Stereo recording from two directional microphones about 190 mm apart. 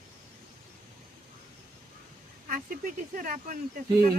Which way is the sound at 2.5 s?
45° right (ahead or behind).